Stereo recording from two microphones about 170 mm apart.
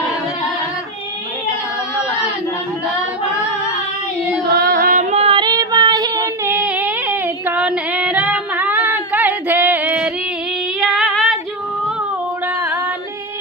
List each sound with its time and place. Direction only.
4.5 s music: 65° right (ahead or behind)
5.1 s child singing: 35° right (ahead or behind)
6.5 s music: 10° right (ahead or behind)
10.8 s female singing: centre (ahead or behind)